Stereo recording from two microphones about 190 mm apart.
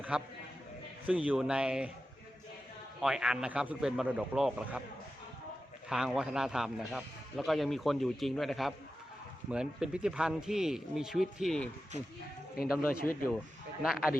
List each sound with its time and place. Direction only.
0.1 s speech: 5° right (ahead or behind)
3.0 s speech: 5° right (ahead or behind)
5.9 s speech: 5° right (ahead or behind)
13.0 s a man's voice: 50° left (ahead or behind)
13.8 s speech: 5° right (ahead or behind)